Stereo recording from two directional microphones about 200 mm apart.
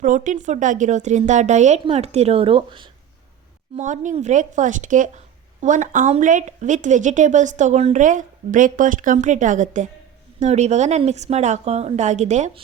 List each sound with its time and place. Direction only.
0.0 s speech: 40° right (ahead or behind)
3.8 s speech: 40° right (ahead or behind)